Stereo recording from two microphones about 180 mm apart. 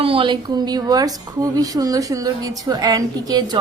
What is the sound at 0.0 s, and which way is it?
A woman's voice, 30° right (ahead or behind).